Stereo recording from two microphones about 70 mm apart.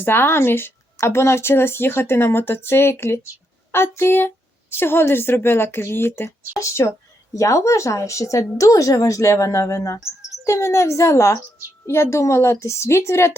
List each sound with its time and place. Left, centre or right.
0.0 s a woman's voice: left